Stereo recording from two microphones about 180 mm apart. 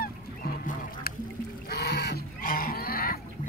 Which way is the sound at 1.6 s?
60° left (ahead or behind).